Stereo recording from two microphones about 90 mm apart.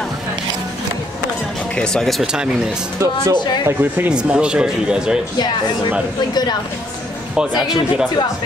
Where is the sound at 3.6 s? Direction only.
20° right (ahead or behind).